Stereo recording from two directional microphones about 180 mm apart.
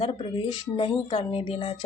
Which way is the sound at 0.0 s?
30° left (ahead or behind).